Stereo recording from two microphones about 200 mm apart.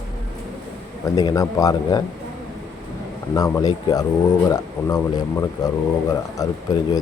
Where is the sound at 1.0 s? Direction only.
20° left (ahead or behind).